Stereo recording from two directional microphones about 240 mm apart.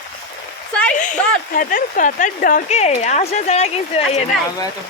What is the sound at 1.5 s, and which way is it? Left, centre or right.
Speech, left.